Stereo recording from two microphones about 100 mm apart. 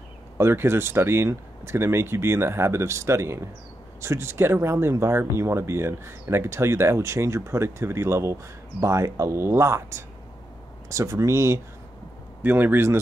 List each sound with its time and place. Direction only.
0.4 s speech: 25° right (ahead or behind)